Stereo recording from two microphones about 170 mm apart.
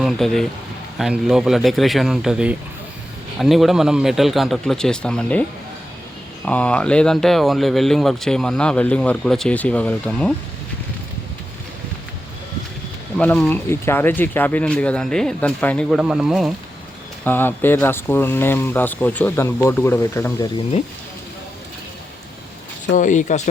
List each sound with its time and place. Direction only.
0.0 s speech: centre (ahead or behind)
13.1 s speech: 10° left (ahead or behind)
17.2 s speech: 10° left (ahead or behind)
22.9 s speech: 50° left (ahead or behind)